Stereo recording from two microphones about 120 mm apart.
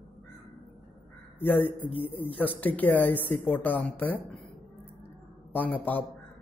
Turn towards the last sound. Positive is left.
turn(degrees=15)  # may be behind; listen again after turning